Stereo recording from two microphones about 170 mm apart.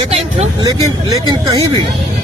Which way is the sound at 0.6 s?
25° right (ahead or behind).